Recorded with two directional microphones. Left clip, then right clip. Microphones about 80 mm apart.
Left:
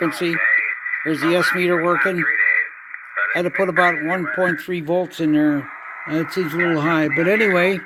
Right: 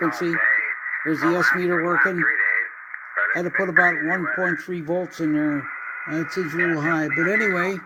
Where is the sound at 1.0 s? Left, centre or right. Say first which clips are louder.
Left 1 dB; centre.